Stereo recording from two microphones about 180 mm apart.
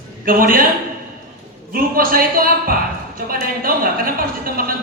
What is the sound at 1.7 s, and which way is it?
A woman's voice, 55° right (ahead or behind).